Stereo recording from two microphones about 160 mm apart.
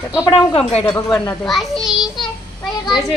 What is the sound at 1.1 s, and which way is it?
Speech, 5° left (ahead or behind).